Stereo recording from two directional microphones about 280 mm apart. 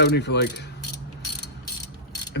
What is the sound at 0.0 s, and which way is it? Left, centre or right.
Speech, left.